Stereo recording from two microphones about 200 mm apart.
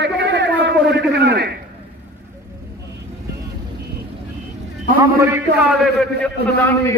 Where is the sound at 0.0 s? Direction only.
60° right (ahead or behind).